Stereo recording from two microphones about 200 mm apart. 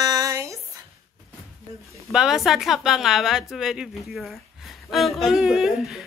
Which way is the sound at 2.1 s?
Centre (ahead or behind).